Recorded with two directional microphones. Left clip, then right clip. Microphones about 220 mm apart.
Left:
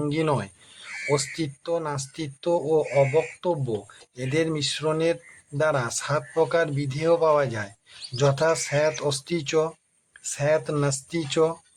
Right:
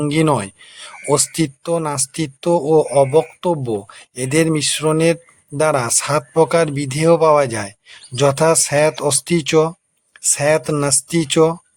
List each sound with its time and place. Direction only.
0.0 s speech: 35° right (ahead or behind)